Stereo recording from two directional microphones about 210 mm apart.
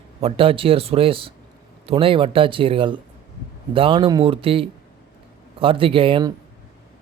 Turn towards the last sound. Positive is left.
turn(degrees=-25)  # may be behind; listen again after turning